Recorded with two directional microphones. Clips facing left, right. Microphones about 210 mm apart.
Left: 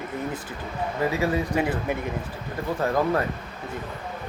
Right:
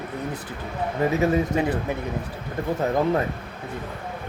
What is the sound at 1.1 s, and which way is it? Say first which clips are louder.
Speech: right 4 dB; 20° right (ahead or behind).